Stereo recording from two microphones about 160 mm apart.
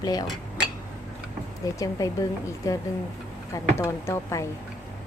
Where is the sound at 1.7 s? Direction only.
20° left (ahead or behind).